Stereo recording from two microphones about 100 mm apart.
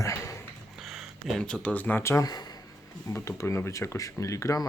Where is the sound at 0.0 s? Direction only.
35° left (ahead or behind).